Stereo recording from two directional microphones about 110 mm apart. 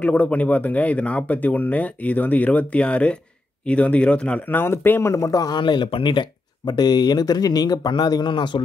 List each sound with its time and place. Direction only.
0.0 s a man's voice: 15° left (ahead or behind); by 8.5 s 45° left (ahead or behind)